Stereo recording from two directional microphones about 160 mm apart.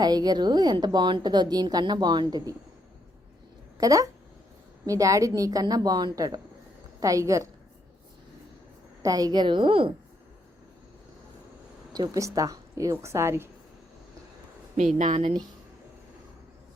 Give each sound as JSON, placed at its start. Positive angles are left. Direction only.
{"t": 0.0, "sound": "a woman's voice", "side_deg": -25}
{"t": 3.8, "sound": "a woman's voice", "side_deg": -20}
{"t": 9.0, "sound": "a woman's voice", "side_deg": -25}
{"t": 11.9, "sound": "a woman's voice", "side_deg": -20}
{"t": 14.9, "sound": "speech", "side_deg": -50}
{"t": 15.2, "sound": "speech", "side_deg": -35}